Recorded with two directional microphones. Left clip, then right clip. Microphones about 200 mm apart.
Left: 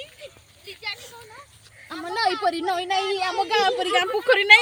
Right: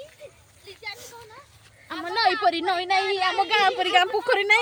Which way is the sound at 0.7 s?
50° right (ahead or behind).